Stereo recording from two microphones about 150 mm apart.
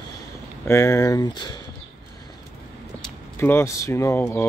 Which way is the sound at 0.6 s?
20° left (ahead or behind).